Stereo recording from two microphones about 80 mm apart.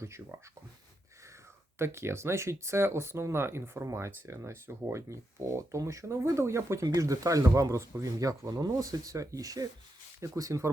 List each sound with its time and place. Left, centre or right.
0.0 s speech: right
1.8 s speech: right
6.8 s speech: right